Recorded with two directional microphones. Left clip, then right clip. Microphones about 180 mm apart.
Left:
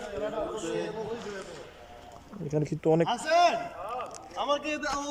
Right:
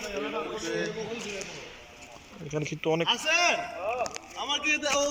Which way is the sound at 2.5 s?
35° left (ahead or behind).